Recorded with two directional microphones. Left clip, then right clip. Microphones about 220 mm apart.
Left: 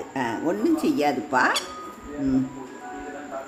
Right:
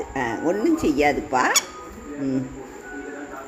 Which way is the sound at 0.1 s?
Centre (ahead or behind).